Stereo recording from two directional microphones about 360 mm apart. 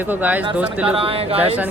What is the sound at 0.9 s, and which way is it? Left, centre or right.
Speech, centre.